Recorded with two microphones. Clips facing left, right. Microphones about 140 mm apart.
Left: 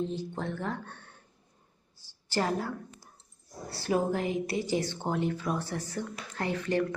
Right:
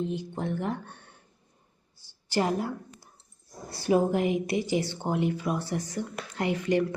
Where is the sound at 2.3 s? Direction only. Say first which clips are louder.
Right 3 dB; 15° right (ahead or behind).